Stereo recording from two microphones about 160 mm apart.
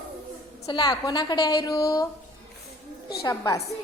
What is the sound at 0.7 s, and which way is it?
A woman's voice, 25° left (ahead or behind).